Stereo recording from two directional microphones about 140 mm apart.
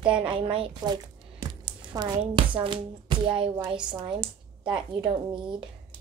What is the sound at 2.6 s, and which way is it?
Speech, 35° right (ahead or behind).